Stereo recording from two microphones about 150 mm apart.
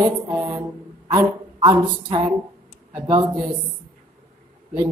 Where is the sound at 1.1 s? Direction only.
30° right (ahead or behind).